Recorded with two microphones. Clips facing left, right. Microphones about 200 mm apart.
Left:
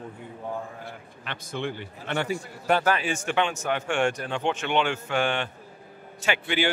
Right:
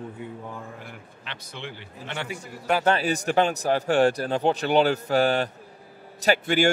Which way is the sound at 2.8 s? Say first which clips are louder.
Right 3 dB; 35° right (ahead or behind).